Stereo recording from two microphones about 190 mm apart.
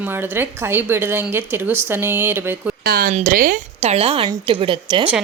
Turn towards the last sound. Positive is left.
turn(degrees=-25)  # may be behind; listen again after turning